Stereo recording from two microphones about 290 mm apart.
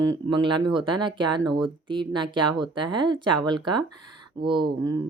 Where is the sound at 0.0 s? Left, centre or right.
Centre.